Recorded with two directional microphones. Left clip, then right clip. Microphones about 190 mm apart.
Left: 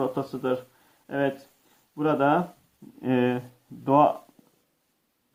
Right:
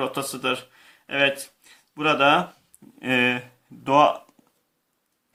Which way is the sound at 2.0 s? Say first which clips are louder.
Right 4 dB; 20° right (ahead or behind).